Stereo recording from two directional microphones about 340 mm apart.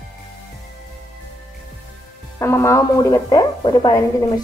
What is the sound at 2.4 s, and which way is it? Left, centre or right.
Speech, centre.